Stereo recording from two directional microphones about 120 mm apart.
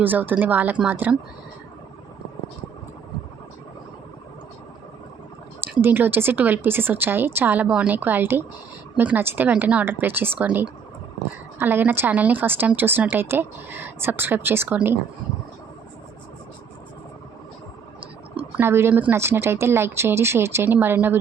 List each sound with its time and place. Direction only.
0.0 s a woman's voice: 15° right (ahead or behind)
5.8 s a woman's voice: 15° right (ahead or behind)
18.5 s speech: 20° right (ahead or behind)